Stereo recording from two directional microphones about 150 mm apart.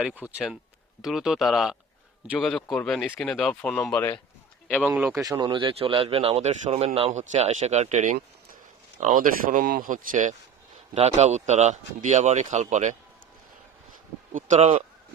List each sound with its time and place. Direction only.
0.0 s speech: 10° right (ahead or behind); by 3.8 s 10° left (ahead or behind)
4.8 s speech: 10° right (ahead or behind); by 9.6 s 55° right (ahead or behind)
9.6 s speech: 80° right; by 10.3 s 60° right (ahead or behind)
10.9 s speech: 45° right (ahead or behind)
14.3 s speech: 50° right (ahead or behind)